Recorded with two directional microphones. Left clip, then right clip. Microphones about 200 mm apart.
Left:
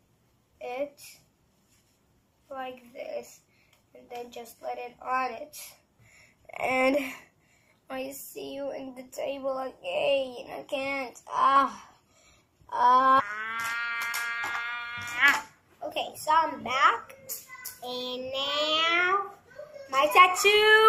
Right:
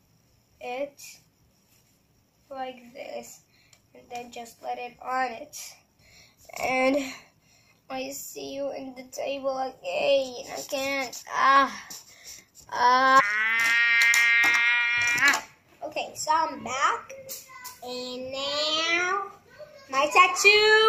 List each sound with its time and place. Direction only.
0.6 s a sound: 15° right (ahead or behind)
2.5 s a child's voice: 15° right (ahead or behind)
6.4 s a woman's voice: centre (ahead or behind)
12.6 s mosquito: 10° right (ahead or behind)
15.8 s a woman's voice: centre (ahead or behind)